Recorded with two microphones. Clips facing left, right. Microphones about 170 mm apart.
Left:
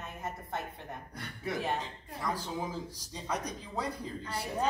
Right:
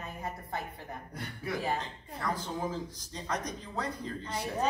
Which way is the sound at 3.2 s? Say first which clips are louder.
Right 1 dB; 10° left (ahead or behind).